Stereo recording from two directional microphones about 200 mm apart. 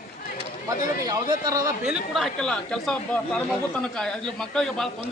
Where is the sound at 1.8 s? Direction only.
Centre (ahead or behind).